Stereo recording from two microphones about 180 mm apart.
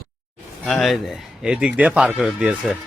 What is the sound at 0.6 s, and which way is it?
Speech, centre (ahead or behind).